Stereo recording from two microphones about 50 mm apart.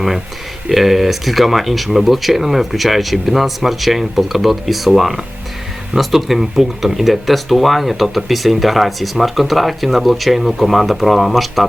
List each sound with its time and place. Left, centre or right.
0.7 s speech: centre